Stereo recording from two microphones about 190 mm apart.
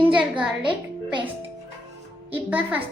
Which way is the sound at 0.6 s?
25° right (ahead or behind).